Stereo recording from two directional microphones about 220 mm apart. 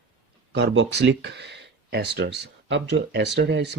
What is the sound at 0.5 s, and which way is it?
Speech, 55° right (ahead or behind).